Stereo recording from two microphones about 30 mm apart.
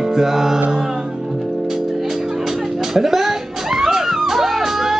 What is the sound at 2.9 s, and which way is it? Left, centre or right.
Music, centre.